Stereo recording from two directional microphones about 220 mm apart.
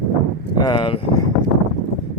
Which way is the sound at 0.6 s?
25° left (ahead or behind).